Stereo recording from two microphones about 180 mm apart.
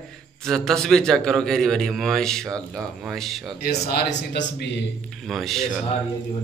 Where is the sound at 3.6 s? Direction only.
65° left (ahead or behind).